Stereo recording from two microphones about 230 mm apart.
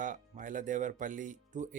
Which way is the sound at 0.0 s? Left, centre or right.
Right.